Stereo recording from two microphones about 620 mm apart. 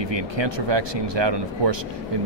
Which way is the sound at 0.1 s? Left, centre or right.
Right.